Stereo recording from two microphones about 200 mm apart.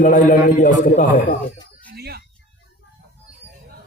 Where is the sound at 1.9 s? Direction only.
50° right (ahead or behind).